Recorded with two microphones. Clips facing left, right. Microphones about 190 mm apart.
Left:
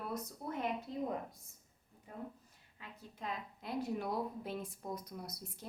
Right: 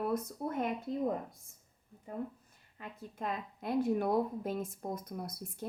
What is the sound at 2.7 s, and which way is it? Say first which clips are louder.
A woman's voice: right 7 dB; 50° right (ahead or behind).